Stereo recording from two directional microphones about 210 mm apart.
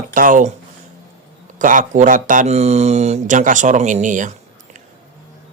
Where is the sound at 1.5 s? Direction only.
35° right (ahead or behind).